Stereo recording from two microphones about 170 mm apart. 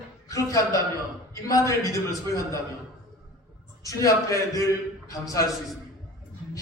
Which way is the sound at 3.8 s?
20° left (ahead or behind).